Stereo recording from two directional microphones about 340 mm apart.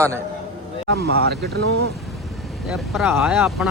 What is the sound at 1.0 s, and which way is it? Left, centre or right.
Speech, right.